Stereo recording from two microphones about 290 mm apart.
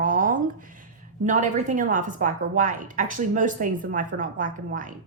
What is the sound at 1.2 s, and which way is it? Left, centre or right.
A woman's voice, right.